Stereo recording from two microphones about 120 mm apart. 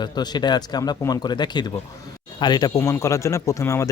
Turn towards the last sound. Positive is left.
turn(degrees=25)  # may be behind; listen again after turning